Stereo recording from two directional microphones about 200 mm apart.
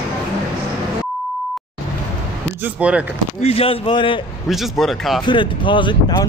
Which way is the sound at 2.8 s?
5° right (ahead or behind).